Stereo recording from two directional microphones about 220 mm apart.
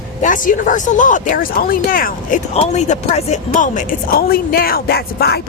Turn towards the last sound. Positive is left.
turn(degrees=45)  # may be behind; listen again after turning